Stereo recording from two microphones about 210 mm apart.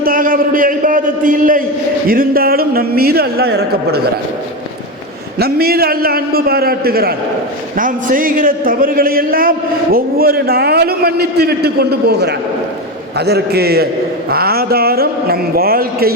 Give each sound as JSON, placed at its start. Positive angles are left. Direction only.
{"t": 0.0, "sound": "a sound", "side_deg": -40}
{"t": 2.0, "sound": "a man's voice", "side_deg": -45}
{"t": 5.4, "sound": "a man's voice", "side_deg": -45}